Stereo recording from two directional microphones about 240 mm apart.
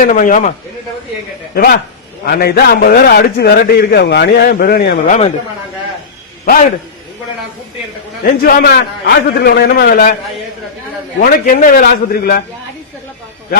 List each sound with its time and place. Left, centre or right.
0.0 s a man's voice: left
1.5 s a man's voice: left
6.4 s a man's voice: left
8.2 s a man's voice: left
11.2 s a man's voice: left